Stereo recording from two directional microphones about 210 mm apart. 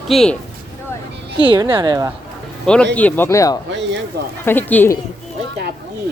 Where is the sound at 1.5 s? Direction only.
25° right (ahead or behind).